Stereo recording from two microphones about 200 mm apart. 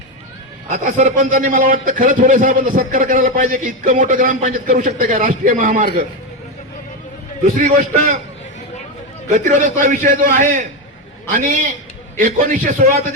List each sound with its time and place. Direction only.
0.7 s a man's voice: 40° right (ahead or behind)
7.4 s a man's voice: 40° right (ahead or behind)
9.3 s a man's voice: 40° right (ahead or behind)